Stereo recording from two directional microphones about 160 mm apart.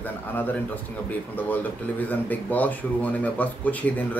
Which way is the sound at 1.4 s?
10° left (ahead or behind).